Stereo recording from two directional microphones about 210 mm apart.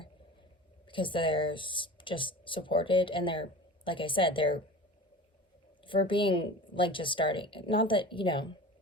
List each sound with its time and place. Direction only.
0.9 s speech: 25° left (ahead or behind)
5.8 s speech: 25° left (ahead or behind)